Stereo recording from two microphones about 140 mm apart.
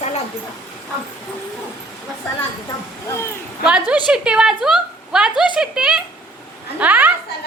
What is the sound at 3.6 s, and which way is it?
A woman's voice, 5° right (ahead or behind).